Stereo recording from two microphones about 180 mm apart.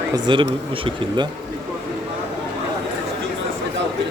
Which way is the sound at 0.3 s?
25° right (ahead or behind).